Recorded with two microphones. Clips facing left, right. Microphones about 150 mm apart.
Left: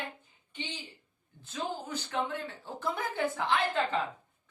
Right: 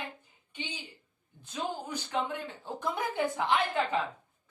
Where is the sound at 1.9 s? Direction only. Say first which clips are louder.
Right 1 dB; 15° right (ahead or behind).